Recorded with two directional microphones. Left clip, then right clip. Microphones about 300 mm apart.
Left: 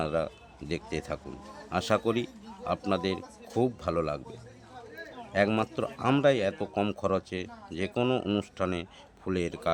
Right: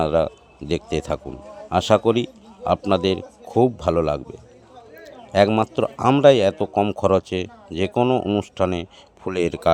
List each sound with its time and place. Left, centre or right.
0.0 s a man's voice: centre
5.3 s a man's voice: centre